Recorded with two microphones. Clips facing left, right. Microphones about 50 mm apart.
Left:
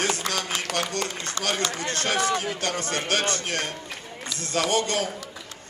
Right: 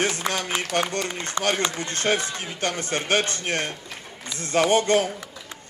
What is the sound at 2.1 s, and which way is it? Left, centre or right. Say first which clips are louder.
Speech: left 4 dB; left.